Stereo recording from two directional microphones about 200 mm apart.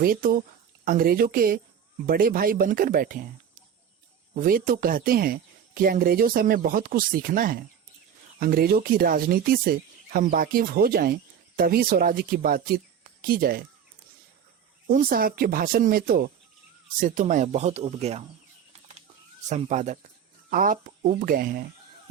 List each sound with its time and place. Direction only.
0.0 s speech: 45° right (ahead or behind)
14.8 s speech: 45° right (ahead or behind); by 18.2 s 30° right (ahead or behind)
19.5 s speech: 35° right (ahead or behind)